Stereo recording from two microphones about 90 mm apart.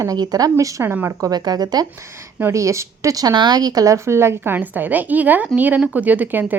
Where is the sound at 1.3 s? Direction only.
50° right (ahead or behind).